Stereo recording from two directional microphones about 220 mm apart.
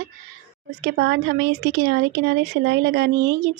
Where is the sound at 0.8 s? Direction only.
50° right (ahead or behind).